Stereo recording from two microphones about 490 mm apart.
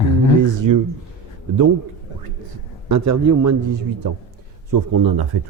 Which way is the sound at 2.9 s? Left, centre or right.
Right.